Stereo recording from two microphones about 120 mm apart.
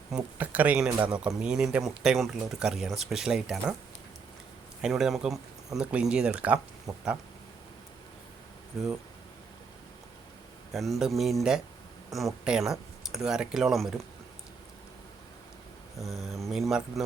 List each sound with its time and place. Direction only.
0.1 s speech: 15° right (ahead or behind)
4.8 s speech: 5° right (ahead or behind)
8.7 s speech: 5° right (ahead or behind)
10.7 s speech: centre (ahead or behind)
16.0 s speech: centre (ahead or behind)